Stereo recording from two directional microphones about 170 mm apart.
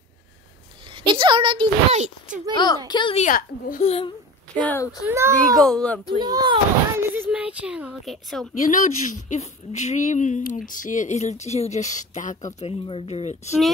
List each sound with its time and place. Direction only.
1.0 s a child's voice: 30° right (ahead or behind)
2.0 s speech: 50° right (ahead or behind)
2.5 s a woman's voice: 25° left (ahead or behind)
3.2 s a woman's voice: 50° left (ahead or behind)
4.6 s speech: 15° left (ahead or behind)
5.0 s a child's voice: 15° right (ahead or behind)
5.6 s speech: 5° left (ahead or behind)
6.0 s speech: 25° right (ahead or behind)
7.2 s speech: 5° right (ahead or behind)
8.5 s a woman's voice: 50° left (ahead or behind)
12.5 s speech: 35° left (ahead or behind)